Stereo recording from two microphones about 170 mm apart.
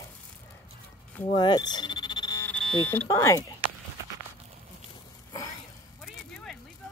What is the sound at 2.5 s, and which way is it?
Buzzer, 10° left (ahead or behind).